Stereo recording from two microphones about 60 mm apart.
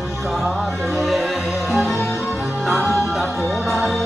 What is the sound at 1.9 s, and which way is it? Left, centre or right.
Music, left.